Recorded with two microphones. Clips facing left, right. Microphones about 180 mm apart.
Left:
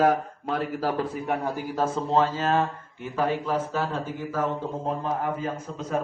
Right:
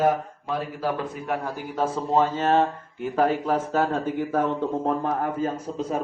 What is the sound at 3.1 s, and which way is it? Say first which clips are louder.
A man's voice: right 3 dB; 45° right (ahead or behind).